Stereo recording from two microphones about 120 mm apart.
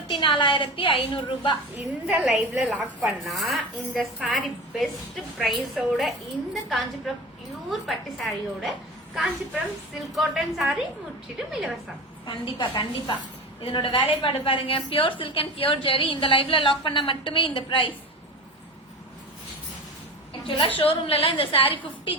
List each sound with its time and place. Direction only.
0.1 s a woman's voice: 45° left (ahead or behind)
2.0 s a woman's voice: 10° right (ahead or behind)
10.2 s a woman's voice: centre (ahead or behind)
12.2 s a woman's voice: 45° left (ahead or behind)
20.4 s a woman's voice: 45° left (ahead or behind)